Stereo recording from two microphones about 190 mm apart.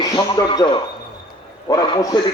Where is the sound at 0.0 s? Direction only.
20° left (ahead or behind).